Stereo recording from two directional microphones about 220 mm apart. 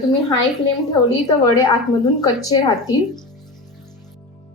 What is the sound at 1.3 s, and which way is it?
A woman's voice, 15° left (ahead or behind).